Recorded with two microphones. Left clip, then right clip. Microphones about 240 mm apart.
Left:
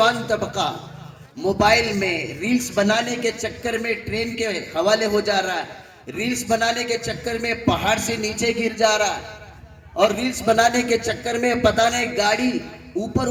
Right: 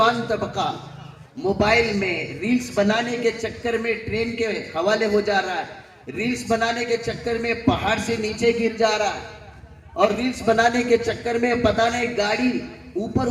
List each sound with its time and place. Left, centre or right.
0.0 s a man's voice: left